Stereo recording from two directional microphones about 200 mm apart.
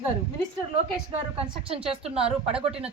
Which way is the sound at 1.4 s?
30° right (ahead or behind).